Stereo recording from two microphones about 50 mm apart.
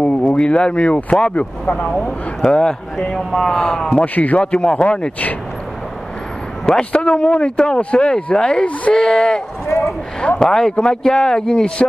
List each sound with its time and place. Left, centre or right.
0.0 s speech: left
4.0 s a man's voice: left
4.4 s speech: centre
6.6 s a man's voice: centre
6.9 s speech: left
9.7 s a sound: left
10.4 s speech: centre